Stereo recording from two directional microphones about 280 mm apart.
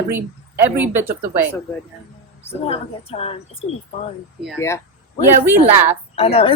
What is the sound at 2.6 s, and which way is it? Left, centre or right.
Speech, left.